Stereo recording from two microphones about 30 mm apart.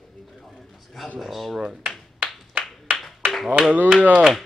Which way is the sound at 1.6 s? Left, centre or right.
Right.